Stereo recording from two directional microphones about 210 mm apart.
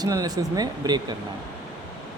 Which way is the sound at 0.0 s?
20° right (ahead or behind).